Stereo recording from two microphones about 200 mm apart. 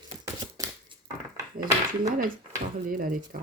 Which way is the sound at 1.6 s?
45° right (ahead or behind).